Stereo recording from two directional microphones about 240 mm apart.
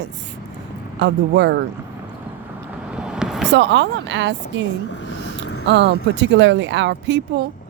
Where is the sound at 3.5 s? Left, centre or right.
Right.